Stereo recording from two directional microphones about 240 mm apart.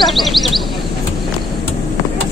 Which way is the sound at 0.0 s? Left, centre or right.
Centre.